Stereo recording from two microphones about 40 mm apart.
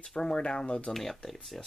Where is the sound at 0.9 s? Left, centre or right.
Centre.